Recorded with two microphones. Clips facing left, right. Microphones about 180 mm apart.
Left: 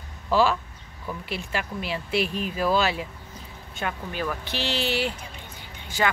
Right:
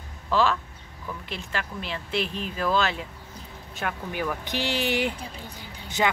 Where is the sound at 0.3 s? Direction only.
10° left (ahead or behind).